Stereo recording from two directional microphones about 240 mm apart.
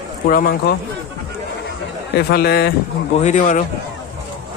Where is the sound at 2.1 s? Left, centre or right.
Left.